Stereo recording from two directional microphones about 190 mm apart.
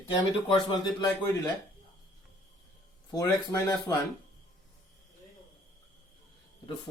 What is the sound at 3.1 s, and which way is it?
Speech, 20° left (ahead or behind).